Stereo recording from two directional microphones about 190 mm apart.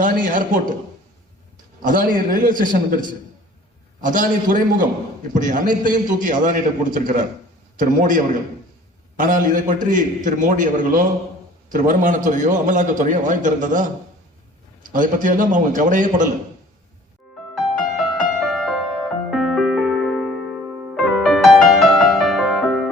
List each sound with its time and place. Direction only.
0.0 s a man's voice: 45° right (ahead or behind)
1.8 s a man's voice: 45° right (ahead or behind)
4.0 s a man's voice: 45° right (ahead or behind)
17.6 s music: centre (ahead or behind)